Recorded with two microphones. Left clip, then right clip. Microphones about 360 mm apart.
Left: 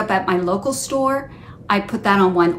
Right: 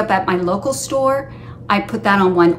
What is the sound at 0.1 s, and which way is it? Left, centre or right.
A woman's voice, centre.